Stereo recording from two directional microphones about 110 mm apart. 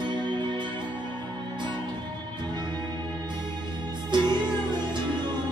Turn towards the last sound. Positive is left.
turn(degrees=-45)  # may be behind; listen again after turning